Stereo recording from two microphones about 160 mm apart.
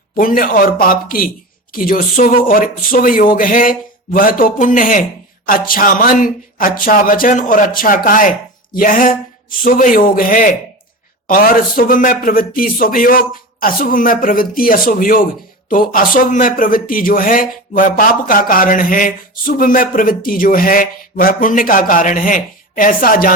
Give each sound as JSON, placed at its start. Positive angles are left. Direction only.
{"t": 0.2, "sound": "speech", "side_deg": 60}